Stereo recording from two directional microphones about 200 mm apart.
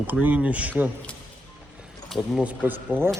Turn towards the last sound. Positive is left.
turn(degrees=-10)  # may be behind; listen again after turning